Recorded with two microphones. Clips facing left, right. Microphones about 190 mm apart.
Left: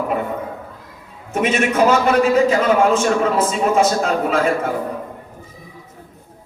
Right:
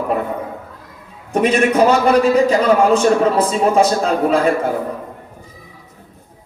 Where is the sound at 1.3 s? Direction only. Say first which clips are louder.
Right 4 dB; 35° right (ahead or behind).